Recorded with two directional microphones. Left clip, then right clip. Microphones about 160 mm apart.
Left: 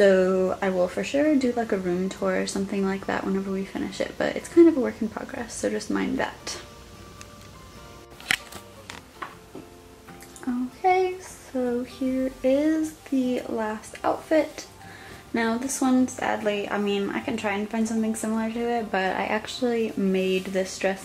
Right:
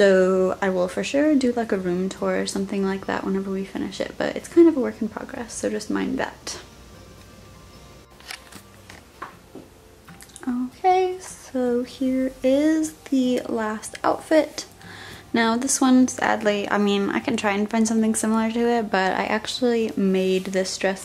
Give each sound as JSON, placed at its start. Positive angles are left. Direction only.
{"t": 0.3, "sound": "speech", "side_deg": -20}
{"t": 10.4, "sound": "a sound", "side_deg": -10}
{"t": 12.4, "sound": "a woman's voice", "side_deg": -25}